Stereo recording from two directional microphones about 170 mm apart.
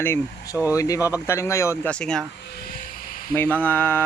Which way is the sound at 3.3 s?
10° left (ahead or behind).